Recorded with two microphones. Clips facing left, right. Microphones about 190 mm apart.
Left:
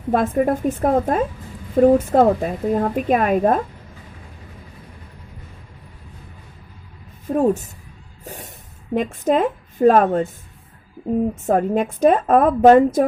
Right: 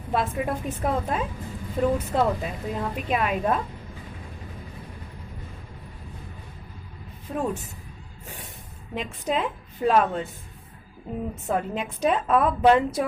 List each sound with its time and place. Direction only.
0.1 s a woman's voice: 45° left (ahead or behind)
7.3 s a woman's voice: 45° left (ahead or behind)
8.2 s music: 40° left (ahead or behind)
9.0 s a woman's voice: 50° left (ahead or behind)
11.4 s a woman's voice: 45° left (ahead or behind)